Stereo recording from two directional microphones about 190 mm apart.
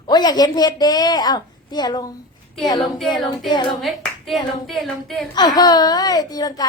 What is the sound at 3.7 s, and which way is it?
Clapping, centre (ahead or behind).